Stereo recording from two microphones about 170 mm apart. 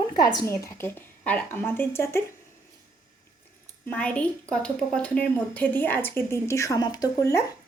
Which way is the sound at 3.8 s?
10° left (ahead or behind).